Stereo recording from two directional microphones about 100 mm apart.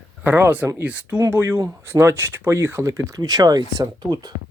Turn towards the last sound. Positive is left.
turn(degrees=-45)  # may be behind; listen again after turning